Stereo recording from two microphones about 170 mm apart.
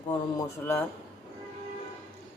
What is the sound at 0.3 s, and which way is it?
Speech, 15° left (ahead or behind).